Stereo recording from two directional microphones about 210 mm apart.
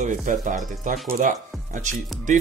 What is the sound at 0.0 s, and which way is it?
Speech, 35° right (ahead or behind).